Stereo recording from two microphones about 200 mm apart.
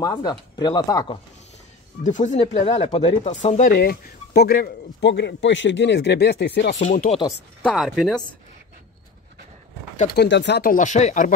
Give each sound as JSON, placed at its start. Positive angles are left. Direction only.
{"t": 0.0, "sound": "speech", "side_deg": 20}
{"t": 2.0, "sound": "speech", "side_deg": 35}
{"t": 3.7, "sound": "speech", "side_deg": 50}
{"t": 6.7, "sound": "speech", "side_deg": 35}
{"t": 7.7, "sound": "speech", "side_deg": 0}
{"t": 10.0, "sound": "speech", "side_deg": 55}